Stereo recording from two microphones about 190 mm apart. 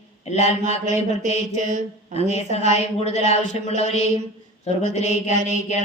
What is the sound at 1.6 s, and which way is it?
Mantra, 40° right (ahead or behind).